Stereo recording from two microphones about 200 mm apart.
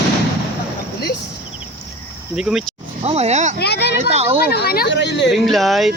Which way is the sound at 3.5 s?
55° left (ahead or behind).